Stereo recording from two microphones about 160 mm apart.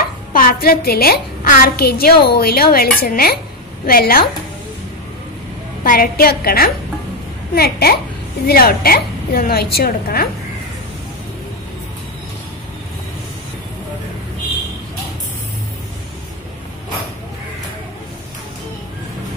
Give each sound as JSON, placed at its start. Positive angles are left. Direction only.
{"t": 0.0, "sound": "a child's voice", "side_deg": 60}
{"t": 5.9, "sound": "a child's voice", "side_deg": 70}